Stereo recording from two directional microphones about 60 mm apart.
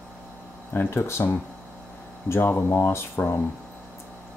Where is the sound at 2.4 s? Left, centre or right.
Left.